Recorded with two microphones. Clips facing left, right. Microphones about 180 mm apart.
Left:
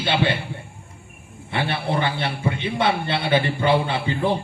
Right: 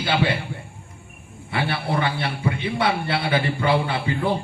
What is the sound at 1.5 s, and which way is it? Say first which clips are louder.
A man's voice: left 1 dB; 25° left (ahead or behind).